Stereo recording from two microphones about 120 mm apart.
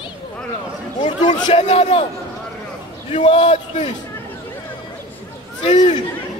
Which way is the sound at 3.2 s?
50° left (ahead or behind).